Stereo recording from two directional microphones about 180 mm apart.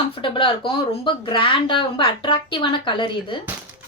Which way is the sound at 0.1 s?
30° left (ahead or behind).